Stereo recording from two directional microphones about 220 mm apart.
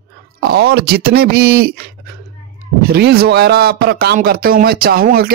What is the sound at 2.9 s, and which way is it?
Speech, 45° right (ahead or behind).